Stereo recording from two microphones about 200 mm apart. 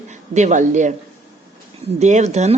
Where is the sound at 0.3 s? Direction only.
35° right (ahead or behind).